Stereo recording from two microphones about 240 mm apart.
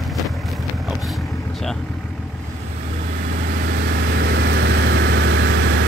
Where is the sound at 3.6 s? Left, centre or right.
Right.